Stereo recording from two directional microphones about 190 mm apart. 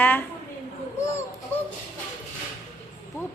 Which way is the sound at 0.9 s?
15° left (ahead or behind).